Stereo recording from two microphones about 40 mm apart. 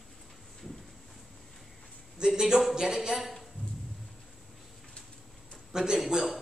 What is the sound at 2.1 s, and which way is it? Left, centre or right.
Speech, centre.